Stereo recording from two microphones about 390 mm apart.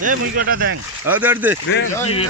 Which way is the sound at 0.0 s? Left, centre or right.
Right.